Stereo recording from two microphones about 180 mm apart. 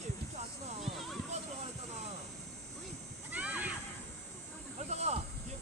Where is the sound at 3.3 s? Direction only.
10° right (ahead or behind).